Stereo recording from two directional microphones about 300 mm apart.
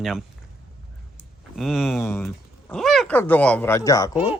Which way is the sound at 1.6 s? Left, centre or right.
Centre.